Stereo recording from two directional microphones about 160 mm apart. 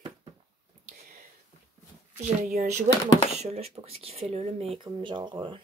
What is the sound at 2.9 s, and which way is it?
Speech, 50° right (ahead or behind).